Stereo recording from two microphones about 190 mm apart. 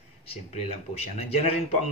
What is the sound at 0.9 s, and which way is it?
Speech, 35° left (ahead or behind).